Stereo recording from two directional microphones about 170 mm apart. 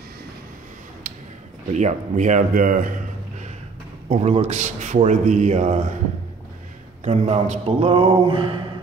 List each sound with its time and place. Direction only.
1.7 s speech: 45° right (ahead or behind)
4.1 s speech: 40° right (ahead or behind)
7.1 s speech: 40° right (ahead or behind)